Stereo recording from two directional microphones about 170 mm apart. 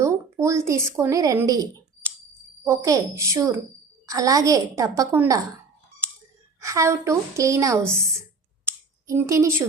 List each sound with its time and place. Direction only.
0.0 s speech: 15° right (ahead or behind)
2.6 s a woman's voice: 20° right (ahead or behind)
6.6 s a woman's voice: 15° right (ahead or behind)
9.0 s a woman's voice: 15° right (ahead or behind)